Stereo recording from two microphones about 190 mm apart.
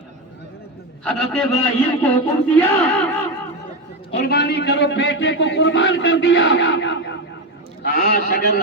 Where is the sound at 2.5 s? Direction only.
5° left (ahead or behind).